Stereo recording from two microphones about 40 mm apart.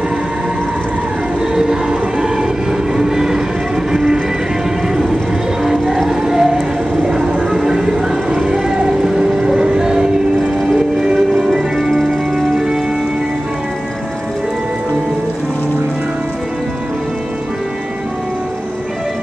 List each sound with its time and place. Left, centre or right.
1.5 s music: centre
5.6 s music: centre
6.0 s a sound: centre
7.4 s music: centre
8.4 s a sound: centre
11.5 s organ: centre